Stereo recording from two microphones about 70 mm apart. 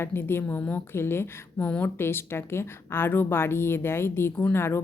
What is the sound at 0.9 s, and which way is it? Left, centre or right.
Speech, left.